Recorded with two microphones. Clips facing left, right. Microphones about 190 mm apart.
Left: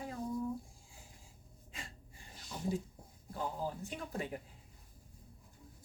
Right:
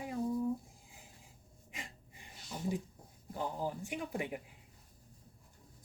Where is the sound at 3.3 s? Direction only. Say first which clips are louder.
Right 1 dB; 15° right (ahead or behind).